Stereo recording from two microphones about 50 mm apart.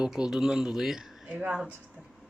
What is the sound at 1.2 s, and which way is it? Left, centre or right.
Speech, right.